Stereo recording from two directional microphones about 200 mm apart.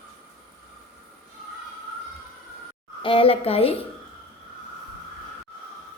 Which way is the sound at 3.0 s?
25° left (ahead or behind).